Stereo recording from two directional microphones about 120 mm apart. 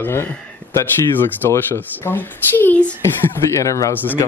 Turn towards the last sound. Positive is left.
turn(degrees=20)  # may be behind; listen again after turning